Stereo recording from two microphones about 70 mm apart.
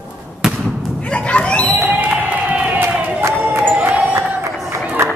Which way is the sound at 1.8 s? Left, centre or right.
Right.